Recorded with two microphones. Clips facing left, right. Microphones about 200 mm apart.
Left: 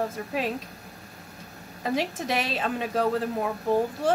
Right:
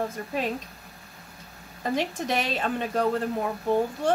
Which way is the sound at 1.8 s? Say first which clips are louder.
Even; 5° left (ahead or behind).